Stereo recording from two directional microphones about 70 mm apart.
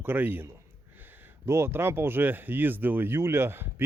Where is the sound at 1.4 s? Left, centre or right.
Right.